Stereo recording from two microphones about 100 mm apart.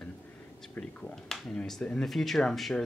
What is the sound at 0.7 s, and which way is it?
Speech, 5° left (ahead or behind).